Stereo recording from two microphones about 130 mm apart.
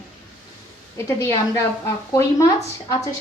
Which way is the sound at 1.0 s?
20° left (ahead or behind).